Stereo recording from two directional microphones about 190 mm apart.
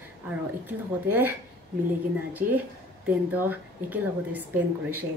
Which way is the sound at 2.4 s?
45° right (ahead or behind).